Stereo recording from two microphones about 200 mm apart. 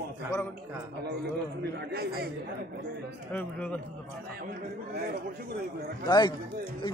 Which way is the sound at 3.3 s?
10° left (ahead or behind).